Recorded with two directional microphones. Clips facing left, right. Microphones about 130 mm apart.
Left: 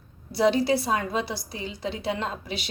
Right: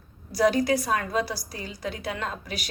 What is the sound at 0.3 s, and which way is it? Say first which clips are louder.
A woman's voice: even; 25° left (ahead or behind).